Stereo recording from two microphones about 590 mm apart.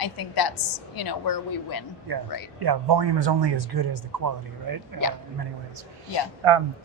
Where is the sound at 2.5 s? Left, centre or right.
Right.